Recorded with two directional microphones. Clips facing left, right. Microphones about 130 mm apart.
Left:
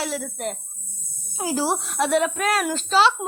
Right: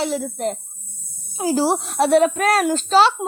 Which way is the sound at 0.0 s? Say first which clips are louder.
Right 5 dB; 25° right (ahead or behind).